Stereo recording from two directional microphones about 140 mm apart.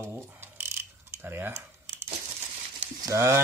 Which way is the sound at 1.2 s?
15° right (ahead or behind).